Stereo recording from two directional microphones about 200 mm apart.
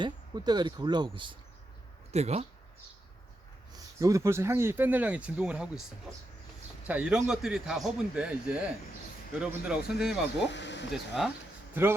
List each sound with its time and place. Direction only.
0.0 s speech: 20° right (ahead or behind)
3.7 s speech: 15° right (ahead or behind)
6.8 s a man's voice: 5° right (ahead or behind)
10.5 s speech: 60° left (ahead or behind)
10.9 s a man's voice: centre (ahead or behind)